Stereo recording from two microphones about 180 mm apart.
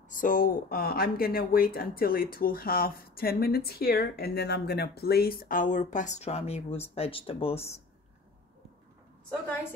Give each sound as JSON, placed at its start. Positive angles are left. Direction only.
{"t": 0.1, "sound": "speech", "side_deg": 50}